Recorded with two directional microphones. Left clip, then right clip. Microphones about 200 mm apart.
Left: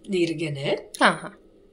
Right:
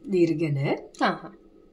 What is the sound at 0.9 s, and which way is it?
Speech, 5° left (ahead or behind).